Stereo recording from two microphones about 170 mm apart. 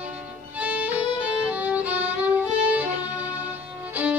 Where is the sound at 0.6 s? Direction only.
10° right (ahead or behind).